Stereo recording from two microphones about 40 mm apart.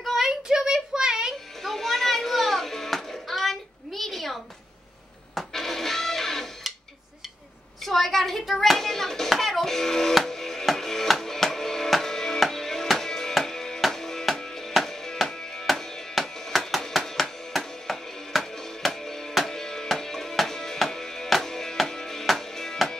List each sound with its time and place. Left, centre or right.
0.2 s a sound: centre
1.6 s music: centre
7.8 s hands: centre
10.1 s music: centre
15.6 s music: centre